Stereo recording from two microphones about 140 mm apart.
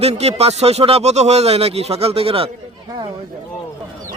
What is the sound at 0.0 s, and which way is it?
Speech, 50° right (ahead or behind).